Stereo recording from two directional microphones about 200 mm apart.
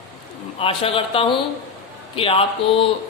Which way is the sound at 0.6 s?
30° left (ahead or behind).